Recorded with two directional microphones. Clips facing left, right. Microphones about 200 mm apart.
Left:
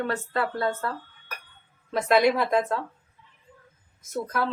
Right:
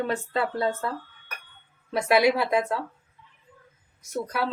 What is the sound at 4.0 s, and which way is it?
Speech, 15° right (ahead or behind).